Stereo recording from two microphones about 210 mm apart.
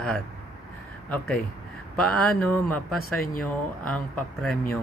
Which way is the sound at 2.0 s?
5° left (ahead or behind).